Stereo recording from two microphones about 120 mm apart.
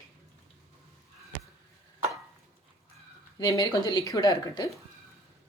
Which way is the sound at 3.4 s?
35° left (ahead or behind).